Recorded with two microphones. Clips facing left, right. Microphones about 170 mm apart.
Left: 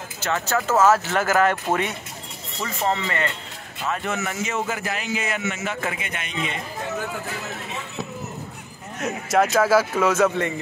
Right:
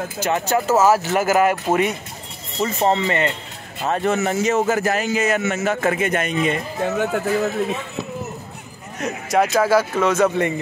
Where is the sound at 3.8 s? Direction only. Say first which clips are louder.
Right 7 dB; 35° right (ahead or behind); by 7.2 s 60° right (ahead or behind).